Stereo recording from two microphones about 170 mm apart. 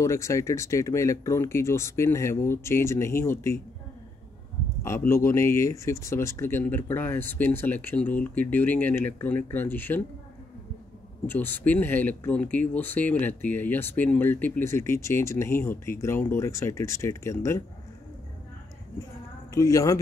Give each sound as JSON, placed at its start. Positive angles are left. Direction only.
{"t": 0.0, "sound": "speech", "side_deg": 15}
{"t": 4.8, "sound": "speech", "side_deg": 15}
{"t": 11.2, "sound": "speech", "side_deg": 10}
{"t": 19.5, "sound": "speech", "side_deg": 20}